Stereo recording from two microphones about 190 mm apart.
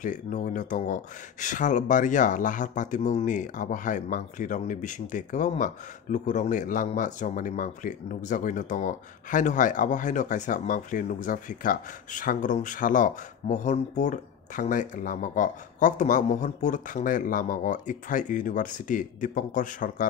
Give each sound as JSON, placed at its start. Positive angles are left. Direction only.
{"t": 0.0, "sound": "speech", "side_deg": 40}